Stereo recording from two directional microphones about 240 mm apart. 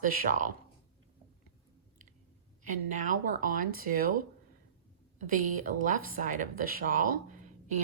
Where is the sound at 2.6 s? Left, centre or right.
Right.